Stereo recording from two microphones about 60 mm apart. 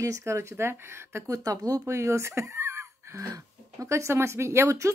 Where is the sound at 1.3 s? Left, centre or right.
Right.